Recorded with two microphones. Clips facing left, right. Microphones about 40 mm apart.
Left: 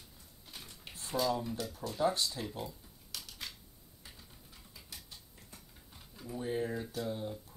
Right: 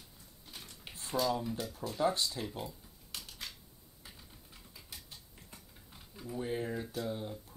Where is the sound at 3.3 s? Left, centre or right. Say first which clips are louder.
Left 2 dB; centre.